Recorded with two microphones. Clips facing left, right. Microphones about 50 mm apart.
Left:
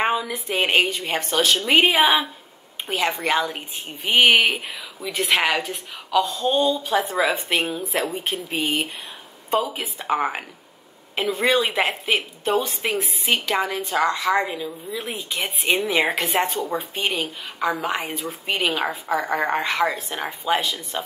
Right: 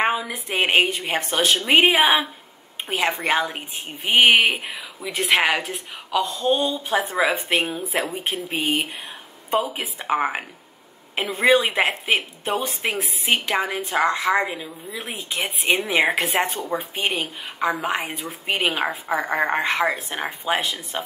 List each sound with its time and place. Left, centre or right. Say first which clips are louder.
0.0 s a woman's voice: even; centre
1.1 s a woman's voice: left 1 dB; right
1.9 s a woman's voice: even; centre
2.9 s a woman's voice: even; centre
5.5 s a woman's voice: even; right
6.1 s a woman's voice: left 1 dB; centre
15.0 s a woman's voice: right 2 dB; centre
20.1 s a woman's voice: left 1 dB; centre
20.6 s a woman's voice: even; right